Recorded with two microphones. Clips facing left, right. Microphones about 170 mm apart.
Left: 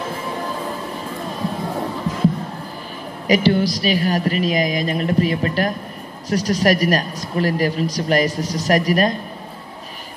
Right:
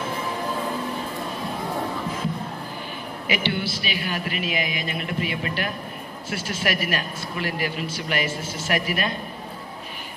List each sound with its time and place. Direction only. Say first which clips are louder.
3.3 s speech: left 10 dB; 40° left (ahead or behind)